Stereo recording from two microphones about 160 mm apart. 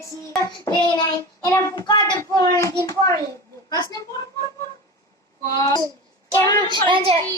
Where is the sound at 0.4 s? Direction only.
20° left (ahead or behind).